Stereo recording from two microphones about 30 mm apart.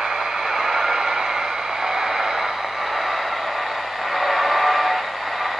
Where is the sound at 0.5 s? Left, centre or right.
Centre.